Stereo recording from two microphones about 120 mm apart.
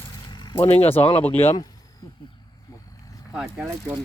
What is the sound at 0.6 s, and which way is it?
Speech, 60° left (ahead or behind).